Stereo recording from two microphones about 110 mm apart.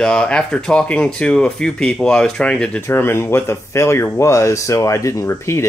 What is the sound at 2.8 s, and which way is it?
Speech, 20° left (ahead or behind).